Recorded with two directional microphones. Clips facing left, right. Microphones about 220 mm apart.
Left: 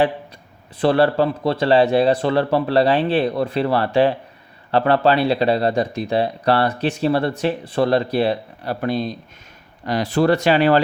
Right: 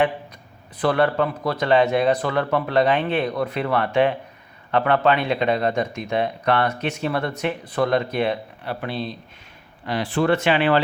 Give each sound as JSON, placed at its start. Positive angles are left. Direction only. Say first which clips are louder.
{"t": 0.8, "sound": "speech", "louder": "left 4 dB", "side_deg": 30}